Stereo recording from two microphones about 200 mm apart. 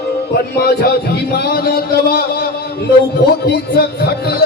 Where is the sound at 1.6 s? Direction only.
50° left (ahead or behind).